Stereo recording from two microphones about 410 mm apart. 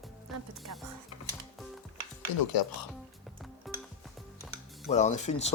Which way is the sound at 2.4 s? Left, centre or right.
Left.